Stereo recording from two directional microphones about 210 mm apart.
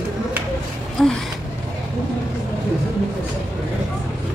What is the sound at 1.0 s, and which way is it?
Speech, centre (ahead or behind).